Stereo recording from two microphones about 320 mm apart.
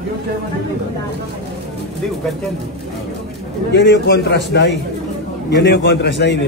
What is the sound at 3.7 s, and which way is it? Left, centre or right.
A man's voice, left.